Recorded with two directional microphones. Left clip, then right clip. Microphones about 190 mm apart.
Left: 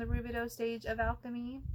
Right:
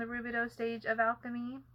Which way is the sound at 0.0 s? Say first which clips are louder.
Right 3 dB; 35° left (ahead or behind).